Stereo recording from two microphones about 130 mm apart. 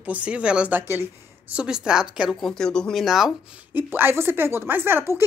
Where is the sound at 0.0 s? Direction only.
10° right (ahead or behind).